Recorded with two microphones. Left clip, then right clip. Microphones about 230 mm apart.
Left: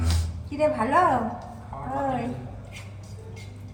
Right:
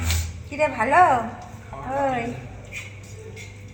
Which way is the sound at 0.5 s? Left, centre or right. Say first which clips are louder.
Right 2 dB; right.